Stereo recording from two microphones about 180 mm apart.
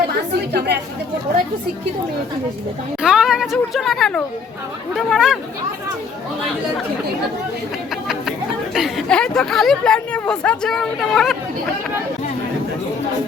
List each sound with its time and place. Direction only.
0.1 s a woman's voice: 65° right (ahead or behind)
3.0 s speech: 5° right (ahead or behind)
8.7 s speech: centre (ahead or behind)